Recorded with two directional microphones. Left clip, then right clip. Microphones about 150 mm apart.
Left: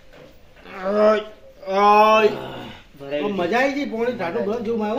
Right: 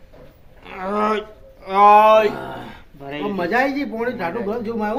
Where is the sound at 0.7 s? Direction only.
40° right (ahead or behind).